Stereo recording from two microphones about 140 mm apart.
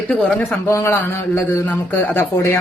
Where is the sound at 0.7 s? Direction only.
15° left (ahead or behind).